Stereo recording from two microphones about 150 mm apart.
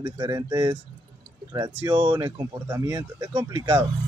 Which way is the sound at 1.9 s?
25° right (ahead or behind).